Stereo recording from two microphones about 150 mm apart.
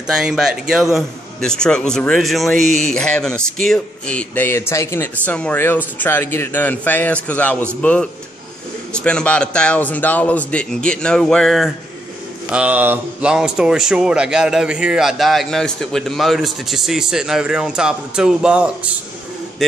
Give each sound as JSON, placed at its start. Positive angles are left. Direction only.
{"t": 0.0, "sound": "a man's voice", "side_deg": -5}
{"t": 2.6, "sound": "speech", "side_deg": -50}
{"t": 2.9, "sound": "a man's voice", "side_deg": 5}